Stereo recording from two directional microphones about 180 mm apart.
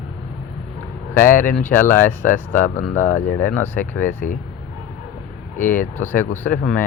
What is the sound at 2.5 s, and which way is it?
Speech, 45° left (ahead or behind).